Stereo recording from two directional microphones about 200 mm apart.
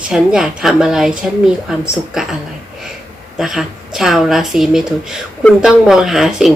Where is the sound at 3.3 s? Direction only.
Centre (ahead or behind).